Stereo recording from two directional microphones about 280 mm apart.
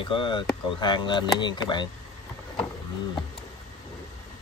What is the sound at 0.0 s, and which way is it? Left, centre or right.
Speech, centre.